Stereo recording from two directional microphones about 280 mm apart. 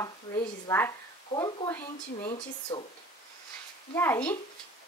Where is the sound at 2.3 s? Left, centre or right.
Left.